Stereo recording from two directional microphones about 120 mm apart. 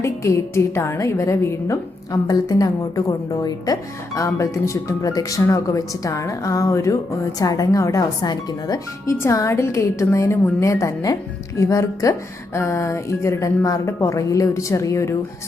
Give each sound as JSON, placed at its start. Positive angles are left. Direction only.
{"t": 0.0, "sound": "a woman's voice", "side_deg": 25}